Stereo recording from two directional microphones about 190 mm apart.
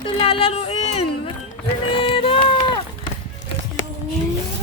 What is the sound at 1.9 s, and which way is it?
Music, 25° left (ahead or behind).